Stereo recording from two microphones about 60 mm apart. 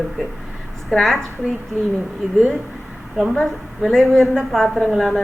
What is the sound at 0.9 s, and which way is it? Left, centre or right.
Speech, centre.